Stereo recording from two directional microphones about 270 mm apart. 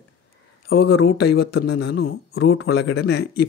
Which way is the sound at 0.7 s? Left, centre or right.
Left.